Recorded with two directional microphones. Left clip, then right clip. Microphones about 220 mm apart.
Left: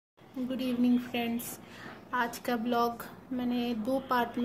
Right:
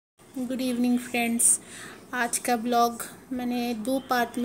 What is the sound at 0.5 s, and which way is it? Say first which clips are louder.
Speech: right 3 dB; 10° right (ahead or behind).